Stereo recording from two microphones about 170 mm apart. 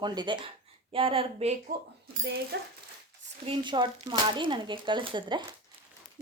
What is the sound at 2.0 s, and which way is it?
Speech, 80° right.